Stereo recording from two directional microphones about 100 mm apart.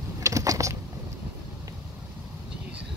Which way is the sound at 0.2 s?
35° right (ahead or behind).